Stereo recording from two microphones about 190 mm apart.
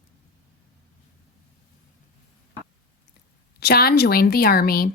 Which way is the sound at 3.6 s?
55° left (ahead or behind).